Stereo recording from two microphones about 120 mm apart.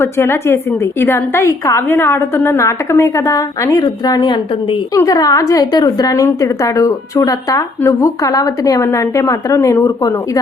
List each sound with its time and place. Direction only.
0.0 s a woman's voice: 20° left (ahead or behind)